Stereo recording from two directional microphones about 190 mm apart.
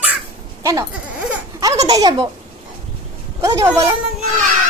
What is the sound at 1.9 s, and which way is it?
Speech, 20° right (ahead or behind).